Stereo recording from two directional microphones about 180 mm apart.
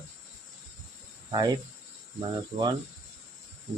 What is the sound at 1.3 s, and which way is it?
Speech, 25° right (ahead or behind).